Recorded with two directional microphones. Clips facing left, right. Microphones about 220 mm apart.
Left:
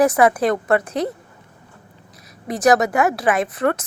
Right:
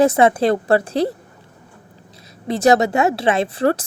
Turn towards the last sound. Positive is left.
turn(degrees=-30)  # may be behind; listen again after turning